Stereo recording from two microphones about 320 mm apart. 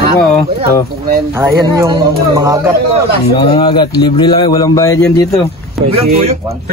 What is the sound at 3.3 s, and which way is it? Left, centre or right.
Speech, centre.